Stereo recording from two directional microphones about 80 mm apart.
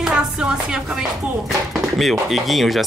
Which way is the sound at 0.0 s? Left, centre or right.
Centre.